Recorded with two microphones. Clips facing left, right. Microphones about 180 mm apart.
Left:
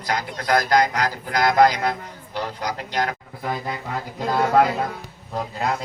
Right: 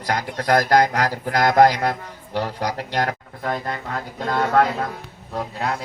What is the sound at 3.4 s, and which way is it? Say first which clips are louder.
A man's voice: right 2 dB; 5° left (ahead or behind).